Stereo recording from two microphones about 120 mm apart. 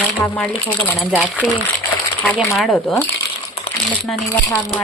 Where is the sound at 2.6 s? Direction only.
5° left (ahead or behind).